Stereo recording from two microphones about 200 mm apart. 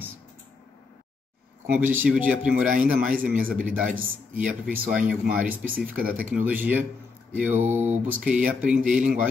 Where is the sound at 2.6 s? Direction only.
40° right (ahead or behind).